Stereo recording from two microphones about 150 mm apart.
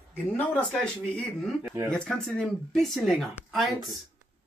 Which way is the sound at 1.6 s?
15° right (ahead or behind).